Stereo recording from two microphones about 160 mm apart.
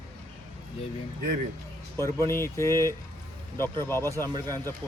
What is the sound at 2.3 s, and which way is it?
Speech, 15° left (ahead or behind).